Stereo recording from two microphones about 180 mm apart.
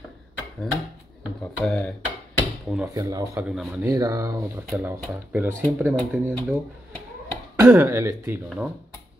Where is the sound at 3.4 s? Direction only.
5° right (ahead or behind).